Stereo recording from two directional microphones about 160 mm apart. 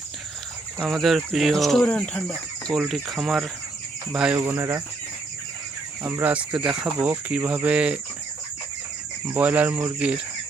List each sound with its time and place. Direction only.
0.8 s speech: centre (ahead or behind)
4.4 s speech: 15° right (ahead or behind)
6.0 s speech: 15° right (ahead or behind)
9.3 s speech: 10° right (ahead or behind)